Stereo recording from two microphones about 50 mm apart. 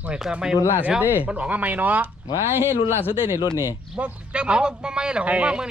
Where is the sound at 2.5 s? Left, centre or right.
Right.